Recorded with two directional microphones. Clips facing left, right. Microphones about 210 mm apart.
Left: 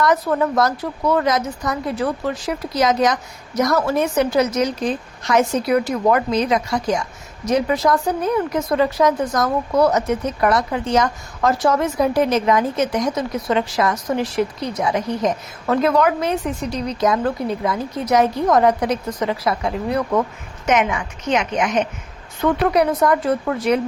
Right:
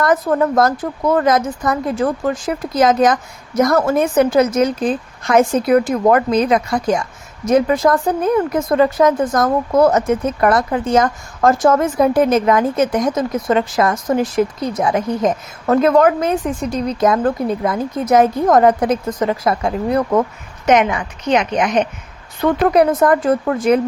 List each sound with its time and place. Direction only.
0.0 s speech: 50° right (ahead or behind)
20.7 s a woman's voice: 35° right (ahead or behind)
22.7 s speech: 50° right (ahead or behind)